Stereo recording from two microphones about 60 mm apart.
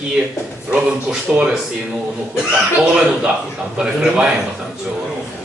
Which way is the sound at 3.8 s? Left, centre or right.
Centre.